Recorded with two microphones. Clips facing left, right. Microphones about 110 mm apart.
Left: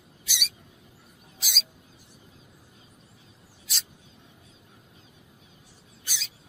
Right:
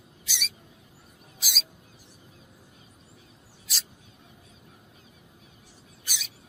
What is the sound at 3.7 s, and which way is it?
Mouse, centre (ahead or behind).